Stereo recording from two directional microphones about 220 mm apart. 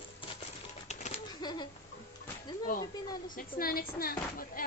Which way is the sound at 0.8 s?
30° left (ahead or behind).